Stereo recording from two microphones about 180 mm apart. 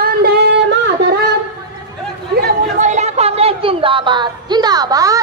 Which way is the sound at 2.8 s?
40° right (ahead or behind).